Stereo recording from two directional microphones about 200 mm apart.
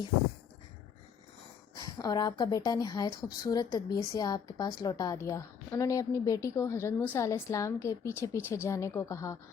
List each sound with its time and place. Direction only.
2.0 s a woman's voice: 20° left (ahead or behind)